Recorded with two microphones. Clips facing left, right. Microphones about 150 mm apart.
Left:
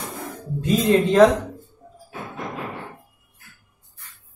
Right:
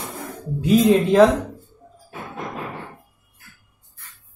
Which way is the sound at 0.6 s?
5° right (ahead or behind).